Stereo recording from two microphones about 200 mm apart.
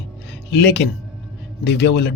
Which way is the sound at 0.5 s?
55° left (ahead or behind).